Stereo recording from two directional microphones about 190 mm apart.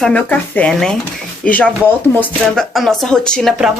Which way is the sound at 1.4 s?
5° left (ahead or behind).